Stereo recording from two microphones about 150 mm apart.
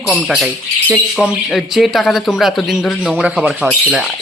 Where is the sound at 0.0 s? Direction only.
10° left (ahead or behind).